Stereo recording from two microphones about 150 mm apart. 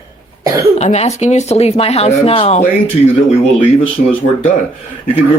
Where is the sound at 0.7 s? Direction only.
50° left (ahead or behind).